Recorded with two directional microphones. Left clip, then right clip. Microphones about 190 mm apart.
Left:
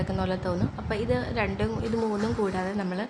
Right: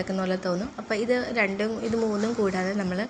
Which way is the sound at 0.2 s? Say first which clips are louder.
Right 1 dB; 5° right (ahead or behind).